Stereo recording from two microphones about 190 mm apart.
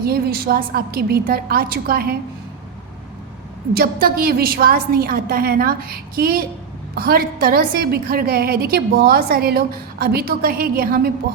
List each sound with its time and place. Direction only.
0.0 s a woman's voice: 55° right (ahead or behind)
3.8 s a woman's voice: 55° right (ahead or behind)